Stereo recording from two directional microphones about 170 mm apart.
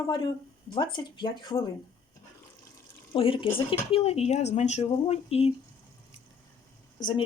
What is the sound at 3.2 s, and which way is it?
Speech, 30° left (ahead or behind).